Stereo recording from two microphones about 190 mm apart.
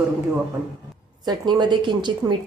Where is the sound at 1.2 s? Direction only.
20° right (ahead or behind).